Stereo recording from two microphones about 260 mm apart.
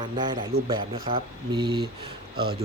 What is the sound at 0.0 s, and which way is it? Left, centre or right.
Speech, centre.